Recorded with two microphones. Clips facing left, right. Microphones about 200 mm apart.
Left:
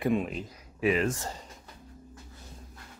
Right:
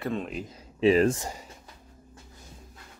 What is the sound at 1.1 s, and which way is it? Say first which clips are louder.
Speech: right 2 dB; 15° right (ahead or behind).